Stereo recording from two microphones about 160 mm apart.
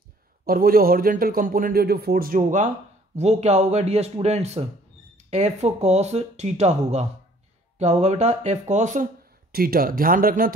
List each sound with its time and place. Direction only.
0.5 s speech: 65° right (ahead or behind)